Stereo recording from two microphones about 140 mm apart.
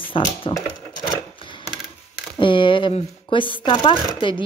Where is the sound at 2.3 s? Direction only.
35° left (ahead or behind).